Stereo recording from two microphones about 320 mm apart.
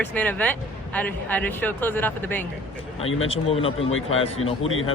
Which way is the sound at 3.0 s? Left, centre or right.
Left.